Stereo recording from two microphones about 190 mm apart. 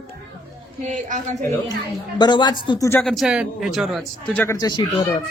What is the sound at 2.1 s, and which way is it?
Speech, 25° left (ahead or behind).